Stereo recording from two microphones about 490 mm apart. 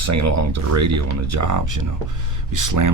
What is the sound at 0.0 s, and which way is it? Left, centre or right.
Speech, right.